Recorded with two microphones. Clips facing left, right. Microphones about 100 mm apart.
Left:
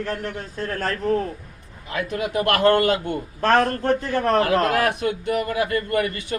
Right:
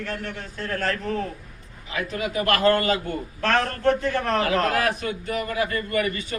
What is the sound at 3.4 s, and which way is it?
A man's voice, 40° left (ahead or behind).